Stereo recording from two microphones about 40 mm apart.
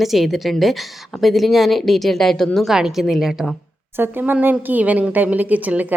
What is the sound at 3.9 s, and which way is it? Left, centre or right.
Speech, right.